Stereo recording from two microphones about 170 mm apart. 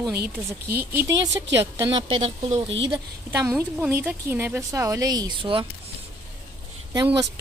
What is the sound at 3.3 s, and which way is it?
A woman's voice, 15° right (ahead or behind).